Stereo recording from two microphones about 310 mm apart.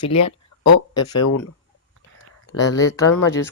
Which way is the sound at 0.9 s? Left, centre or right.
Centre.